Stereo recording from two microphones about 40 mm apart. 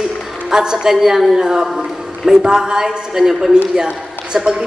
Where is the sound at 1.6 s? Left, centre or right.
Centre.